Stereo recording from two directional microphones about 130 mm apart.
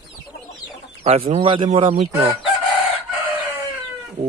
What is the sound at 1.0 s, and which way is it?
Speech, 50° right (ahead or behind).